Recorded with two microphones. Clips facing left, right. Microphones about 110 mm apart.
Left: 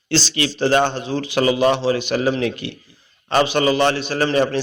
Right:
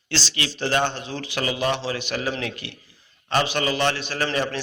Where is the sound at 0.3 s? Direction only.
35° left (ahead or behind).